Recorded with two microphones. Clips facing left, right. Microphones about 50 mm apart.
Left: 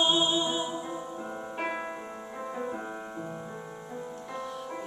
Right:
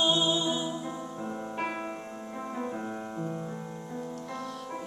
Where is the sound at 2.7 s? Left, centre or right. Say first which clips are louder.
Right 1 dB; centre.